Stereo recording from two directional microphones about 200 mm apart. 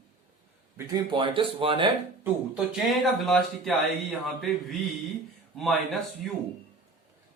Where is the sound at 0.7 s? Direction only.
20° right (ahead or behind).